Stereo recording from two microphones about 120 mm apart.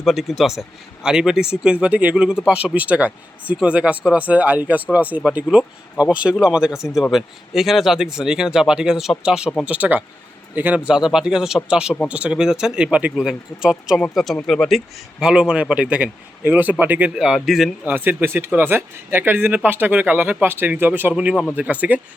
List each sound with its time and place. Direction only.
0.0 s speech: centre (ahead or behind)
17.8 s speech: 15° right (ahead or behind)